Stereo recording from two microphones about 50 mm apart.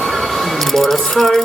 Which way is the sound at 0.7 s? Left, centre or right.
Centre.